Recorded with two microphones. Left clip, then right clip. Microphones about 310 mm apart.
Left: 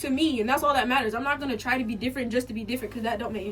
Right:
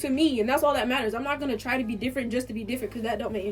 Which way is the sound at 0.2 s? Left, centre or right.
Centre.